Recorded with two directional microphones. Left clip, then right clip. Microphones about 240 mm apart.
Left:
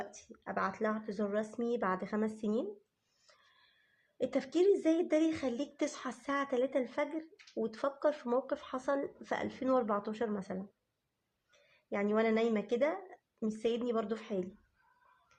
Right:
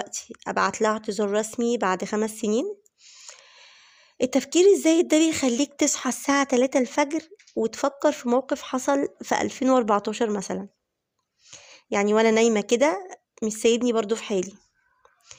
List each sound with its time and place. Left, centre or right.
0.0 s speech: right
4.2 s speech: right
11.9 s speech: right